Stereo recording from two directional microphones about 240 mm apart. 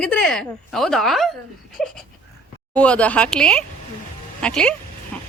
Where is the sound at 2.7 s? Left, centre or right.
Centre.